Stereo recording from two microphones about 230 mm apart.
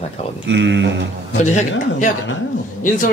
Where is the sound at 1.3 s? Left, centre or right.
Left.